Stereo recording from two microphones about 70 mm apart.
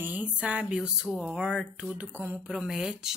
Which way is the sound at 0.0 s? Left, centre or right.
Centre.